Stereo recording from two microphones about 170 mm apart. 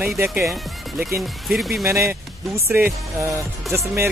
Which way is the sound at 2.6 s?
15° right (ahead or behind).